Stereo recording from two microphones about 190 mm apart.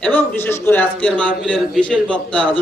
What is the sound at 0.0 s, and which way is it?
A man's voice, 10° left (ahead or behind).